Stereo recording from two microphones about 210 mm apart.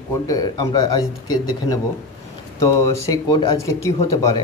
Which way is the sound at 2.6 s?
15° left (ahead or behind).